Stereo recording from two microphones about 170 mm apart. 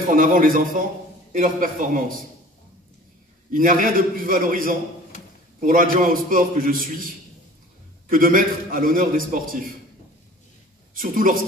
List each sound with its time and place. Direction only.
0.0 s a man's voice: 55° right (ahead or behind)
3.5 s a man's voice: 55° right (ahead or behind)
8.1 s a man's voice: 55° right (ahead or behind)
11.0 s a man's voice: 55° right (ahead or behind)